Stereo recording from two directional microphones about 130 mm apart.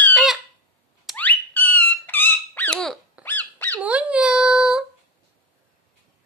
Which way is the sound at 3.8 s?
10° right (ahead or behind).